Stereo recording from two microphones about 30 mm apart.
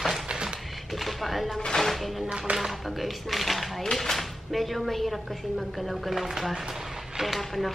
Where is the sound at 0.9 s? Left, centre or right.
Centre.